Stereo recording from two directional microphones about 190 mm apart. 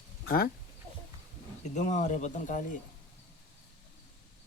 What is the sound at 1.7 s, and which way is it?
Speech, 40° left (ahead or behind).